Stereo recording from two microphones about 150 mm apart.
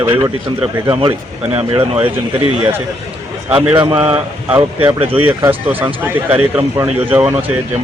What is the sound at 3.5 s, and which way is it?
Speech, 10° right (ahead or behind).